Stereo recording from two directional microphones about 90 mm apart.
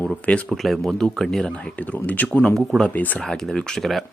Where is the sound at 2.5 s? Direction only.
5° left (ahead or behind).